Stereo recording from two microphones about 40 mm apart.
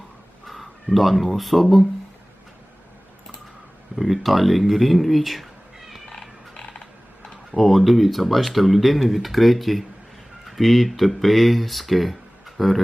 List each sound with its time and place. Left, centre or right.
0.4 s speech: centre
3.9 s speech: centre
6.1 s music: centre
7.5 s speech: centre